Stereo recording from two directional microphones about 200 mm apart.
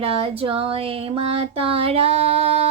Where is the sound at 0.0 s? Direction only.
30° right (ahead or behind).